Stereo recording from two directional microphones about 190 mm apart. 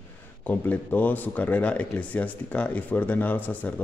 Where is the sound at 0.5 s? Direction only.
10° left (ahead or behind).